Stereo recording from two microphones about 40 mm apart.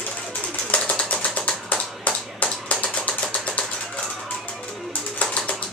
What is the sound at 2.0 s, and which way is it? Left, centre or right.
Typewriter, left.